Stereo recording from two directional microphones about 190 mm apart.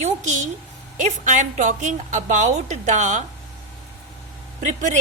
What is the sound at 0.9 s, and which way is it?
A woman's voice, 40° right (ahead or behind).